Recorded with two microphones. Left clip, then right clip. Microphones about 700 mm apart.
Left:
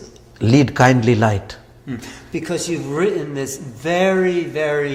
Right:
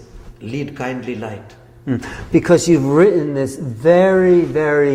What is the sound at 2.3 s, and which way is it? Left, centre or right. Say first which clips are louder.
A man's voice: right 11 dB; right.